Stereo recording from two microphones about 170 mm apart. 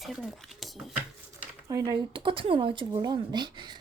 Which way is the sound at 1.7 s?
20° right (ahead or behind).